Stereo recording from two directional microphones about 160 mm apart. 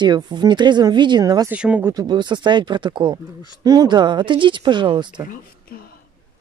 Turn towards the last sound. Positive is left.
turn(degrees=70)  # may be behind; listen again after turning